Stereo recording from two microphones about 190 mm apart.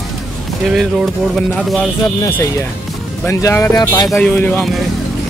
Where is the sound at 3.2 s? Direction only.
15° left (ahead or behind).